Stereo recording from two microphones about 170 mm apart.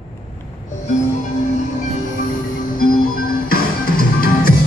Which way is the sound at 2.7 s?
55° left (ahead or behind).